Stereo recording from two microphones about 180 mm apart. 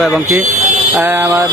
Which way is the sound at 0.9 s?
10° right (ahead or behind).